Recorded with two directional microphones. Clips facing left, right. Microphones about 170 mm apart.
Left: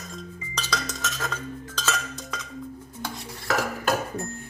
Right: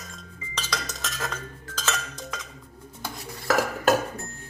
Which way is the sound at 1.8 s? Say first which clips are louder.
Even; 5° right (ahead or behind).